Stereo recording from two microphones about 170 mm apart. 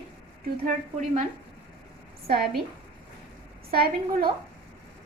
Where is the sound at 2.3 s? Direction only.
65° right (ahead or behind).